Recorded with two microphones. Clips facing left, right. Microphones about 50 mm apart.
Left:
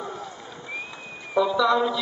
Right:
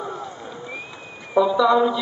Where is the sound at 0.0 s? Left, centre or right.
Centre.